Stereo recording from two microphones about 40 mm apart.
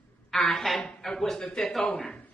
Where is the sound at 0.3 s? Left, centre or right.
Centre.